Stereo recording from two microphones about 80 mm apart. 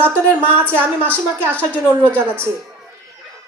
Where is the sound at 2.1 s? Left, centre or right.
Right.